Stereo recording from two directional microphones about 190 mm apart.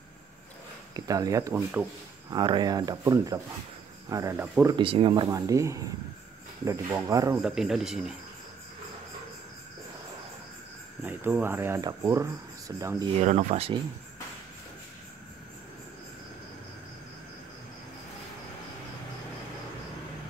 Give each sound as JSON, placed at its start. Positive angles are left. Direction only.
{"t": 0.9, "sound": "speech", "side_deg": -20}
{"t": 2.3, "sound": "speech", "side_deg": -25}
{"t": 4.7, "sound": "speech", "side_deg": -25}
{"t": 7.4, "sound": "a man's voice", "side_deg": 0}
{"t": 11.0, "sound": "speech", "side_deg": -10}
{"t": 13.2, "sound": "speech", "side_deg": -35}